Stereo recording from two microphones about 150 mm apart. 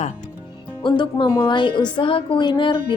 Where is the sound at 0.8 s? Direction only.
30° left (ahead or behind).